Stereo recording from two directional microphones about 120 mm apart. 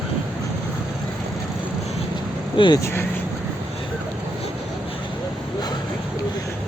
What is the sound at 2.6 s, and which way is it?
Speech, 40° left (ahead or behind).